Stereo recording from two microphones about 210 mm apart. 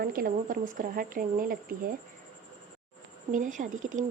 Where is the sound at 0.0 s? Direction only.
45° right (ahead or behind).